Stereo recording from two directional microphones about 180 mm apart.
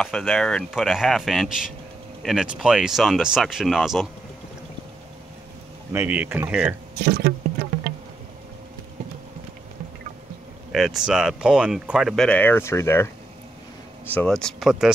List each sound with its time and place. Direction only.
0.0 s speech: centre (ahead or behind)
5.9 s speech: 10° right (ahead or behind)
7.0 s speech: 65° right (ahead or behind)
10.7 s speech: centre (ahead or behind)